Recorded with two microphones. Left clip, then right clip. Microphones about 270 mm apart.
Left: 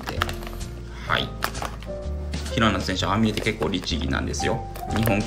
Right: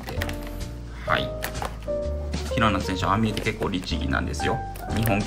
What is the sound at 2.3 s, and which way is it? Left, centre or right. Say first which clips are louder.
Speech: left 1 dB; centre.